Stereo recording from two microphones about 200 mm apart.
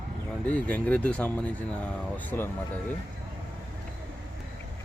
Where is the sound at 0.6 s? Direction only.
5° left (ahead or behind).